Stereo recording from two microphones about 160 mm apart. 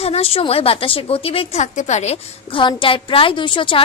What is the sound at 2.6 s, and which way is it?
A woman's voice, 35° left (ahead or behind).